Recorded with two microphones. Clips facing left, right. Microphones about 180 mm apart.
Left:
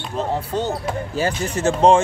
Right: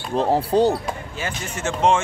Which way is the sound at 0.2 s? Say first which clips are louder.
Right 6 dB; 35° right (ahead or behind).